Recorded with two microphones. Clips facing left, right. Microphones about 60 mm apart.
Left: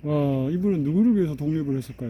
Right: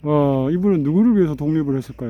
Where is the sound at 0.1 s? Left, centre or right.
Right.